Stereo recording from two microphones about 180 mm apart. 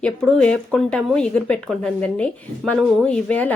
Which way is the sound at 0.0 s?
5° left (ahead or behind).